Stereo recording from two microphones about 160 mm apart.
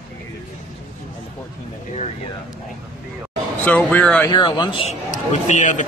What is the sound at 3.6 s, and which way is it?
Speech, 10° left (ahead or behind).